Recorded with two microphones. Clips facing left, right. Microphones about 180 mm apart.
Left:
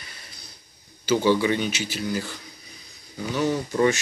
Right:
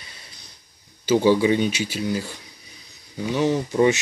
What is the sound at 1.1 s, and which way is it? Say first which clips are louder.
Speech: right 3 dB; 30° right (ahead or behind).